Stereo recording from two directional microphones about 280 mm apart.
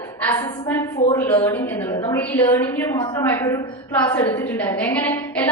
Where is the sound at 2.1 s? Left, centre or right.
Centre.